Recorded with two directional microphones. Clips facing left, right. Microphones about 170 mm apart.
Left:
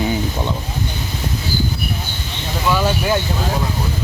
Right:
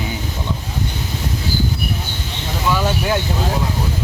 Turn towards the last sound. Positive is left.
turn(degrees=5)  # may be behind; listen again after turning